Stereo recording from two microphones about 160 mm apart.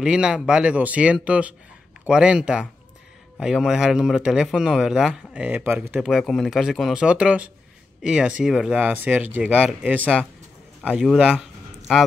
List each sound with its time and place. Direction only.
0.0 s speech: 5° right (ahead or behind)